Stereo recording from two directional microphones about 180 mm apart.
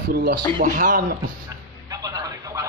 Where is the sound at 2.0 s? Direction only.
20° right (ahead or behind).